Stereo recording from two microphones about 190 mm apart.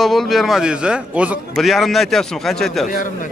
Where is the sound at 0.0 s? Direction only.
Centre (ahead or behind).